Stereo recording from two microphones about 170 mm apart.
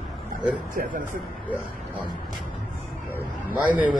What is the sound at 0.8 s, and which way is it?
Speech, 50° right (ahead or behind).